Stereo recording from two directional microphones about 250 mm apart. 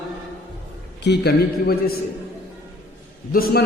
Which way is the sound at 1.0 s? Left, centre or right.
Left.